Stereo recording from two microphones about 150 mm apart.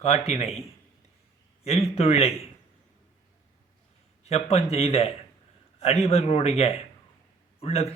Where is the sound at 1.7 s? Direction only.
40° left (ahead or behind).